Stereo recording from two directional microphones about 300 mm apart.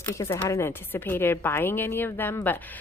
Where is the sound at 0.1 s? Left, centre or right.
Centre.